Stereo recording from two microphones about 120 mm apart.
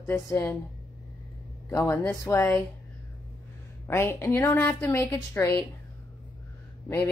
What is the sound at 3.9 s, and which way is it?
Speech, 20° left (ahead or behind).